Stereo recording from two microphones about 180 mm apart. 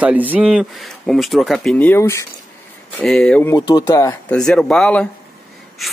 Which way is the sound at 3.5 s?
20° left (ahead or behind).